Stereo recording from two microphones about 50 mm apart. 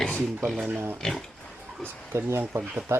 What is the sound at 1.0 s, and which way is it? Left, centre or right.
Pig, centre.